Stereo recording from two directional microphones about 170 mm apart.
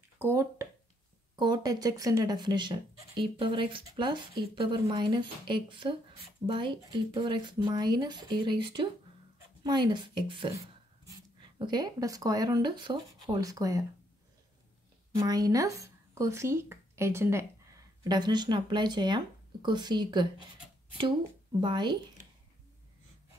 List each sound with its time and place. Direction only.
0.2 s a sound: 15° right (ahead or behind)
1.3 s speech: 25° right (ahead or behind)
15.1 s speech: 20° right (ahead or behind)